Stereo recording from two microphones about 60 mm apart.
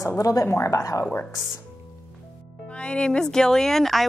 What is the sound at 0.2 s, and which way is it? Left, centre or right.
Speech, left.